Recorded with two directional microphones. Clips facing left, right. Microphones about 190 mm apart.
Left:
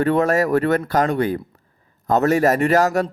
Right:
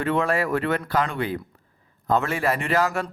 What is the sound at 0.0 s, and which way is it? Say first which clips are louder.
Speech: left 6 dB; 40° left (ahead or behind).